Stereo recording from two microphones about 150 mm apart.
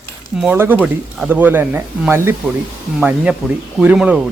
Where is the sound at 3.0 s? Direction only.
5° right (ahead or behind).